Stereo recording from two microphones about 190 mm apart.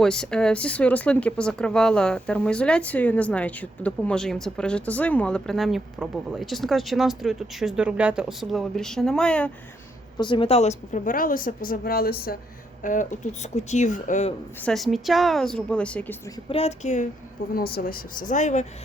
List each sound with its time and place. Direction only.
0.0 s speech: 5° left (ahead or behind)
10.2 s a woman's voice: 25° left (ahead or behind); by 12.4 s 55° left (ahead or behind)
12.8 s speech: 40° left (ahead or behind)
14.6 s speech: centre (ahead or behind)
16.5 s speech: 35° left (ahead or behind)
17.5 s a woman's voice: 55° left (ahead or behind)